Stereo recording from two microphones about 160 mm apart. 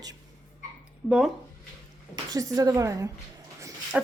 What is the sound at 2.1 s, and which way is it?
A woman's voice, 25° right (ahead or behind).